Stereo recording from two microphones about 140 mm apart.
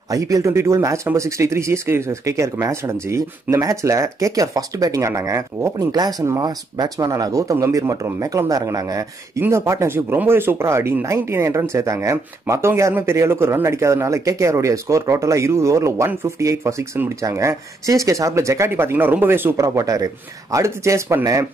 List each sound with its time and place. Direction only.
0.1 s speech: 25° right (ahead or behind)